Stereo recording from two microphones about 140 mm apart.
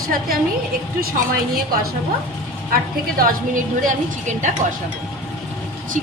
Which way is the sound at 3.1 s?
80° right.